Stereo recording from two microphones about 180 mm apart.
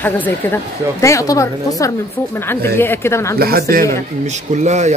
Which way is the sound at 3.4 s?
55° right (ahead or behind).